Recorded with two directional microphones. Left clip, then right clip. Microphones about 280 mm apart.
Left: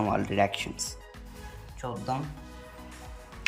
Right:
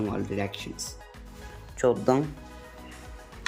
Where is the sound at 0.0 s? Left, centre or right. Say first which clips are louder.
Left 5 dB; centre.